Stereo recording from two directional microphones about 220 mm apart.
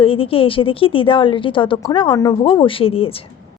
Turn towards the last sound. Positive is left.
turn(degrees=25)  # may be behind; listen again after turning